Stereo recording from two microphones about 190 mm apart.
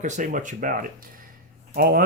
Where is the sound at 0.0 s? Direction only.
45° right (ahead or behind).